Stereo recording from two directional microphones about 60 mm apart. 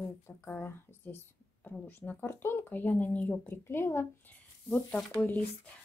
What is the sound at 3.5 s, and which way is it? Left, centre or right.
Speech, left.